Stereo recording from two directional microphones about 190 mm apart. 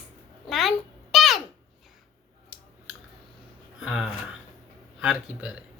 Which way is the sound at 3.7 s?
Centre (ahead or behind).